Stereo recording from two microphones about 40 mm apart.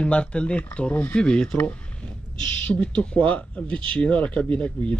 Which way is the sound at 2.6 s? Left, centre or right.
Left.